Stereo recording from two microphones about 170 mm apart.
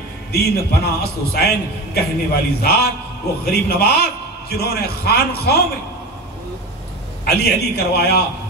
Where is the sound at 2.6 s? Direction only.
70° left (ahead or behind).